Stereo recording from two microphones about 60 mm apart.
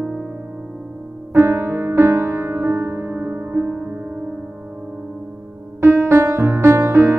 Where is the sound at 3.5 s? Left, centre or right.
Right.